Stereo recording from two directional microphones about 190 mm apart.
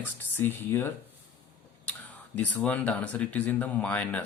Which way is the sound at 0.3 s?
10° left (ahead or behind).